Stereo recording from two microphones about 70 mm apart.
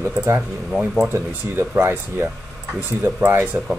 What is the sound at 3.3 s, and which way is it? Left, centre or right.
Speech, right.